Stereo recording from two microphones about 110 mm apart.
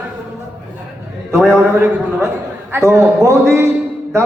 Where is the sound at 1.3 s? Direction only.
20° right (ahead or behind).